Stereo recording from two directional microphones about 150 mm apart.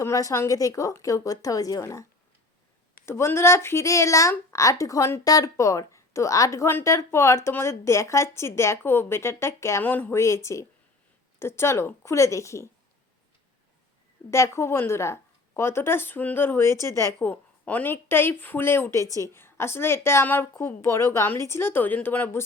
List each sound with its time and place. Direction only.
0.0 s speech: 20° left (ahead or behind)
3.1 s speech: 15° left (ahead or behind)
14.3 s a woman's voice: 20° left (ahead or behind)